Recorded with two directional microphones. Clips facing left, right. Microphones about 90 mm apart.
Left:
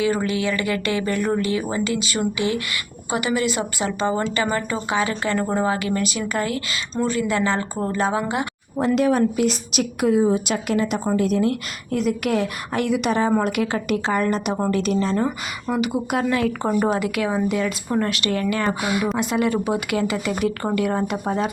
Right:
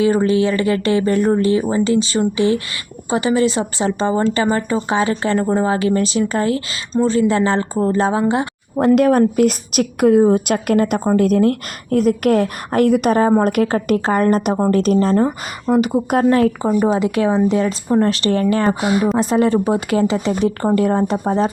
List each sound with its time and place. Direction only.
0.0 s a woman's voice: 30° right (ahead or behind)
9.0 s a woman's voice: 50° right (ahead or behind)
15.1 s speech: 25° right (ahead or behind)
15.7 s a woman's voice: 40° right (ahead or behind)
16.6 s speech: 10° right (ahead or behind)
17.0 s a woman's voice: 25° right (ahead or behind)